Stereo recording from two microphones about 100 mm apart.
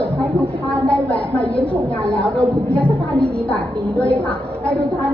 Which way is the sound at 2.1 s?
15° left (ahead or behind).